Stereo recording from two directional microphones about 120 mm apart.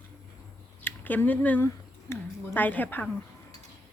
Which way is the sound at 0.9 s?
15° left (ahead or behind).